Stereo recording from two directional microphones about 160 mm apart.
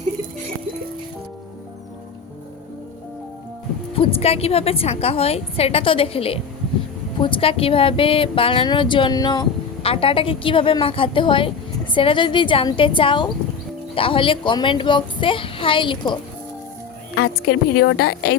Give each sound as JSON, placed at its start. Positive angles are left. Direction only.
{"t": 3.9, "sound": "speech", "side_deg": 35}
{"t": 17.2, "sound": "a woman's voice", "side_deg": 85}